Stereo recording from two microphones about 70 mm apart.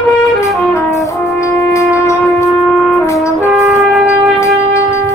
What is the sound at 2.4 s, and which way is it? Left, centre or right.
Wind instrument, centre.